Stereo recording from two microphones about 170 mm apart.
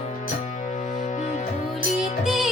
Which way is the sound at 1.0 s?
45° left (ahead or behind).